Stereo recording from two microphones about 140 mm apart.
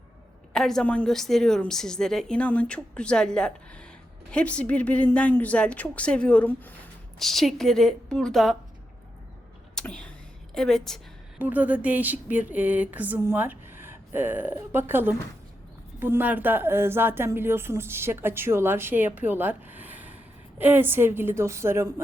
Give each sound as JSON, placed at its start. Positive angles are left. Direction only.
{"t": 0.5, "sound": "a woman's voice", "side_deg": 5}
{"t": 7.2, "sound": "a woman's voice", "side_deg": 0}
{"t": 9.7, "sound": "a woman's voice", "side_deg": 5}
{"t": 11.3, "sound": "speech", "side_deg": -10}